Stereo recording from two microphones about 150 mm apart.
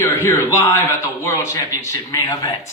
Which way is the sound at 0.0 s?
15° left (ahead or behind).